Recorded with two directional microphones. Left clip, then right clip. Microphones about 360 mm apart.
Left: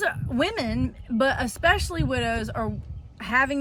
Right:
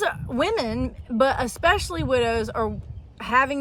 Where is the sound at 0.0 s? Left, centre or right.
Centre.